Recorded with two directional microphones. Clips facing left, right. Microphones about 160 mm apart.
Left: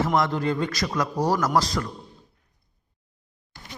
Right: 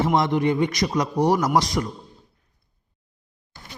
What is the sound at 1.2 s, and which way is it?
Speech, 15° right (ahead or behind).